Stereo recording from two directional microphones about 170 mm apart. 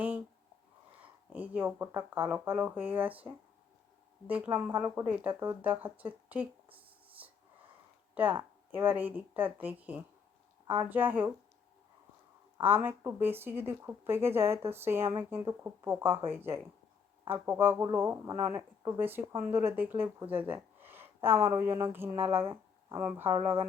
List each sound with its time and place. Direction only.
1.3 s speech: 10° right (ahead or behind)
7.2 s snort: 10° right (ahead or behind)
8.7 s speech: 10° right (ahead or behind)
12.8 s speech: 15° right (ahead or behind)